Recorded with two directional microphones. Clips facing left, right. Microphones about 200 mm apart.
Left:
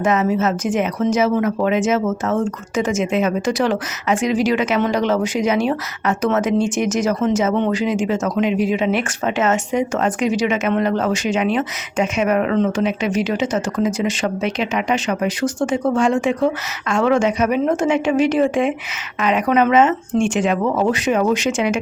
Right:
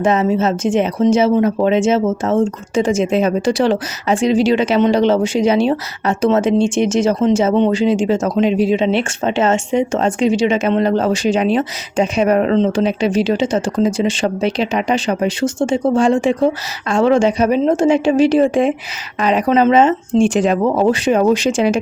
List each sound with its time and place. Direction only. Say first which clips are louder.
0.0 s speech: right 3 dB; 30° right (ahead or behind)